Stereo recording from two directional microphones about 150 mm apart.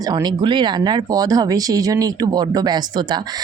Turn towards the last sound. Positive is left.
turn(degrees=-30)  # may be behind; listen again after turning